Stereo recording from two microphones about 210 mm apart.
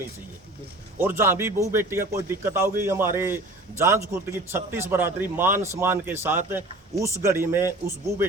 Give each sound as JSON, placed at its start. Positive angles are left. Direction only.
{"t": 0.9, "sound": "a man's voice", "side_deg": -10}